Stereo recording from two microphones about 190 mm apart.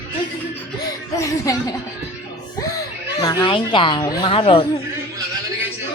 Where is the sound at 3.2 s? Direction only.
20° left (ahead or behind).